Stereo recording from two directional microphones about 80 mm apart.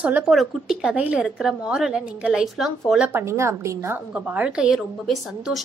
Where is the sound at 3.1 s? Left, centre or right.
Right.